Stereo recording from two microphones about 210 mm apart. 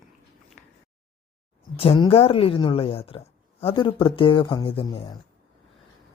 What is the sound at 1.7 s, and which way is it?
Speech, 25° left (ahead or behind).